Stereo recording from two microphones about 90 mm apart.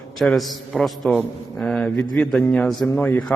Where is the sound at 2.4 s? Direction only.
15° left (ahead or behind).